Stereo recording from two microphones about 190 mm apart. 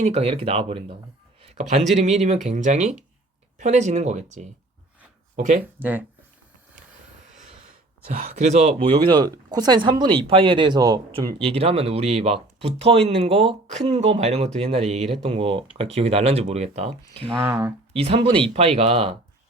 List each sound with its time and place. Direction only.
0.0 s speech: 35° right (ahead or behind)
1.4 s a sound: 35° right (ahead or behind)
2.0 s speech: 35° right (ahead or behind)
5.8 s speech: 10° right (ahead or behind)
8.0 s speech: 50° right (ahead or behind)
17.4 s speech: 10° right (ahead or behind)
17.9 s speech: 30° right (ahead or behind)